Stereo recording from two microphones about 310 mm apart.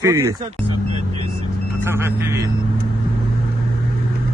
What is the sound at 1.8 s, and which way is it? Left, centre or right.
Speech, centre.